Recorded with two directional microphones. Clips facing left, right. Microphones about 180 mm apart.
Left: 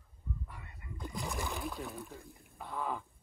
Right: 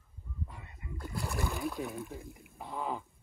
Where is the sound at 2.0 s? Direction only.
15° right (ahead or behind).